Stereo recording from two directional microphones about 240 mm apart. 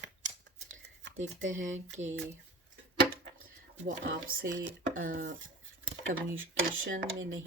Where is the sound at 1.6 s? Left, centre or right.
Right.